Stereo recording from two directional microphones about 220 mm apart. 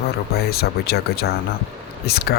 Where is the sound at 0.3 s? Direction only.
45° left (ahead or behind).